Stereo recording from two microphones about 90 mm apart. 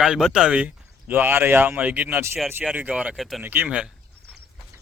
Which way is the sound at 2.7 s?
15° right (ahead or behind).